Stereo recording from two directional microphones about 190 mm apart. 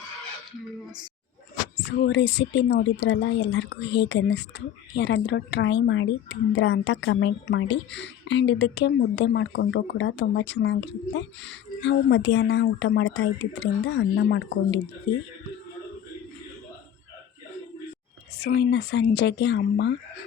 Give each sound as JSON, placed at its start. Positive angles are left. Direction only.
{"t": 1.9, "sound": "a woman's voice", "side_deg": 65}
{"t": 18.3, "sound": "speech", "side_deg": 60}